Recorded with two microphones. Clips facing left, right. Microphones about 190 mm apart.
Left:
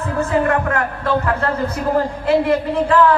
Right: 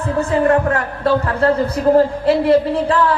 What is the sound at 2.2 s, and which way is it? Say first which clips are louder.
Speech: right 3 dB; 35° right (ahead or behind).